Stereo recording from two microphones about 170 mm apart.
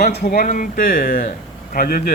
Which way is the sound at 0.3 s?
50° left (ahead or behind).